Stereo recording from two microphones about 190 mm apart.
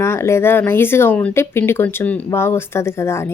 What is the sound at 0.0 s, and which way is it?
Speech, 15° left (ahead or behind).